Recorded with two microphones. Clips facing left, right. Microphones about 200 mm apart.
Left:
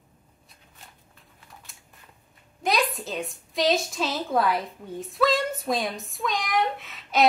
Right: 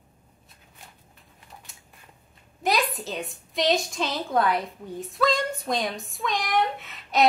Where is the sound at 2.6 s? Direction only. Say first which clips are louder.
Even; centre (ahead or behind).